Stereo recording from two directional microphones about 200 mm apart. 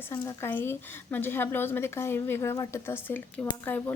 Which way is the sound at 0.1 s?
15° left (ahead or behind).